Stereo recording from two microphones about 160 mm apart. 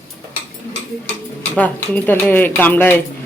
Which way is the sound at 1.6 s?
10° left (ahead or behind).